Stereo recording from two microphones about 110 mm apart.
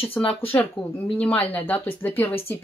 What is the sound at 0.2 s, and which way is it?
A woman's voice, 15° left (ahead or behind).